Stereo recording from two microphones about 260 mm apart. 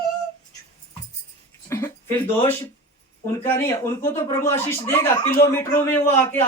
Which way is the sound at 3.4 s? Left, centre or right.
Centre.